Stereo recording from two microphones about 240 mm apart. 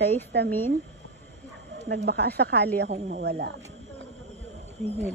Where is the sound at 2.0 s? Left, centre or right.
Right.